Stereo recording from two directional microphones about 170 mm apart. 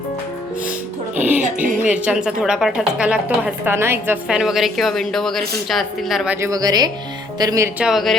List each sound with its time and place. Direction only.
1.1 s music: 10° right (ahead or behind)
1.4 s speech: 50° right (ahead or behind)
1.9 s a woman's voice: 5° right (ahead or behind)
6.5 s speech: 20° right (ahead or behind)
7.8 s a woman's voice: centre (ahead or behind)